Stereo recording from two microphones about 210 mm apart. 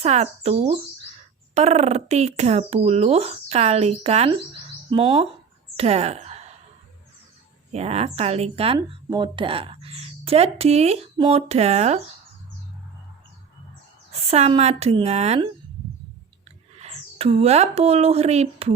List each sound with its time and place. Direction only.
0.0 s a child's voice: 30° right (ahead or behind)
5.7 s a sound: 30° right (ahead or behind)
7.7 s speech: 30° right (ahead or behind)
14.1 s a child's voice: 30° right (ahead or behind)
16.7 s speech: 30° right (ahead or behind)